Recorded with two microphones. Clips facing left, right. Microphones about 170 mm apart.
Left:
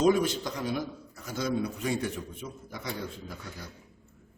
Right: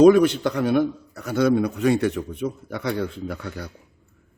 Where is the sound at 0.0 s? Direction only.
65° right (ahead or behind).